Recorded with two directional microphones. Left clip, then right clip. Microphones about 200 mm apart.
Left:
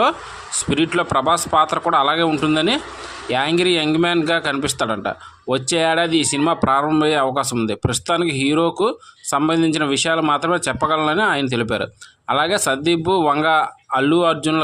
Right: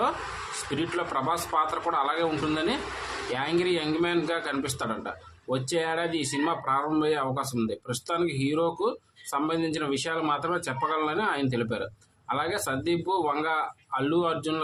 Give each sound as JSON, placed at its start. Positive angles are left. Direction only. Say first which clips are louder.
{"t": 0.8, "sound": "speech", "louder": "left 11 dB", "side_deg": 50}